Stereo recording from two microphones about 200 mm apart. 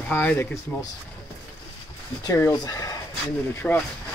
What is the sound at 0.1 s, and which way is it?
Speech, 10° left (ahead or behind).